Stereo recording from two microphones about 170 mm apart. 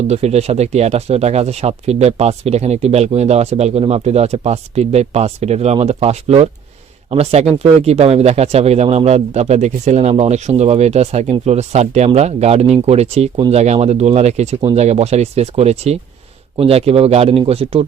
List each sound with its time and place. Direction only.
0.1 s speech: 40° right (ahead or behind)